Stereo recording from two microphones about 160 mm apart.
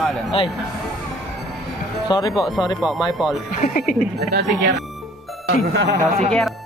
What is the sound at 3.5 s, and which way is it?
Speech, 60° left (ahead or behind).